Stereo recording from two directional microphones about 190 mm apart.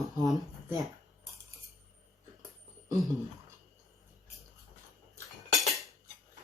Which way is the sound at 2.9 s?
Centre (ahead or behind).